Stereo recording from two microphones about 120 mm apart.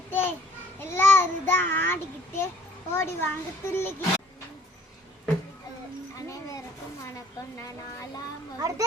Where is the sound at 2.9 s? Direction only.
20° left (ahead or behind).